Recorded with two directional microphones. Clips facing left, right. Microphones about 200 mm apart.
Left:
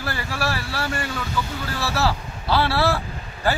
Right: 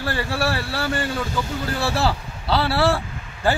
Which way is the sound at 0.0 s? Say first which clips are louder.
Right 4 dB; 30° right (ahead or behind).